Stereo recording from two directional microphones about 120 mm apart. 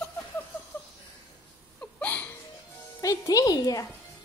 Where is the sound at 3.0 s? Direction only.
30° left (ahead or behind).